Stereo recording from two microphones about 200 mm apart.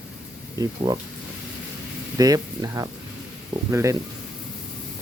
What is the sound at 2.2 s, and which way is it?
Speech, 15° right (ahead or behind).